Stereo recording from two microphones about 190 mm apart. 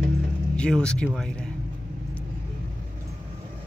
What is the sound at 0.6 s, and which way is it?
Speech, 5° left (ahead or behind).